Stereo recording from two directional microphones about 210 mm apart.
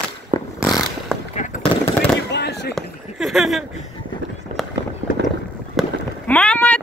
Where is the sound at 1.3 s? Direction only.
35° left (ahead or behind).